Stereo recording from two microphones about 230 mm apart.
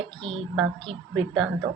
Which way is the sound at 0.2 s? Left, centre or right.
Centre.